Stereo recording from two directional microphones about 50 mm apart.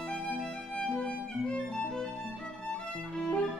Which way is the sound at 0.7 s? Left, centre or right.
Centre.